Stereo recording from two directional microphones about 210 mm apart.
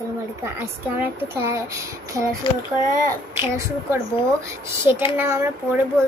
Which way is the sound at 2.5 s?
20° left (ahead or behind).